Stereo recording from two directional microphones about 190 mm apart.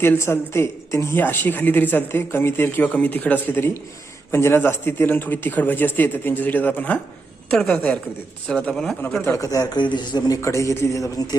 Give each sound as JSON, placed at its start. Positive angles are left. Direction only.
{"t": 0.0, "sound": "speech", "side_deg": 10}